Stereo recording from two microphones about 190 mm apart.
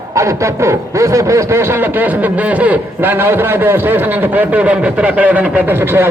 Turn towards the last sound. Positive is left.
turn(degrees=-10)  # may be behind; listen again after turning